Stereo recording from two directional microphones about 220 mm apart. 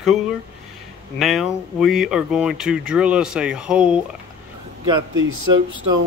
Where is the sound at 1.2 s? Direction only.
Centre (ahead or behind).